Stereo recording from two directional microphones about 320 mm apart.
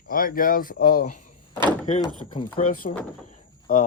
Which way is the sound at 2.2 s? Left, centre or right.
Centre.